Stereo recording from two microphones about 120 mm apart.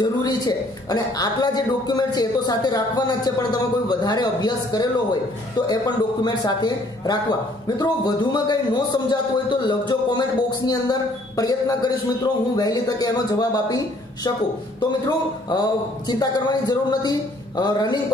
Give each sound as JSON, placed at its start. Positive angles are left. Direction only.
{"t": 0.0, "sound": "a man's voice", "side_deg": 35}
{"t": 6.2, "sound": "a man's voice", "side_deg": 35}